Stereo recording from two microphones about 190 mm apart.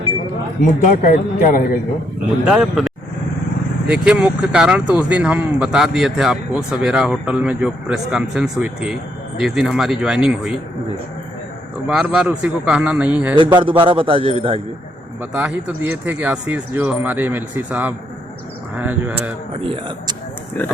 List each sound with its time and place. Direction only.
0.8 s a man's voice: 45° left (ahead or behind)
2.5 s speech: 5° right (ahead or behind)
11.9 s speech: 5° right (ahead or behind)
13.3 s a man's voice: 25° right (ahead or behind)
15.2 s speech: 5° right (ahead or behind)
19.6 s a man's voice: 30° right (ahead or behind)
20.6 s speech: 10° left (ahead or behind)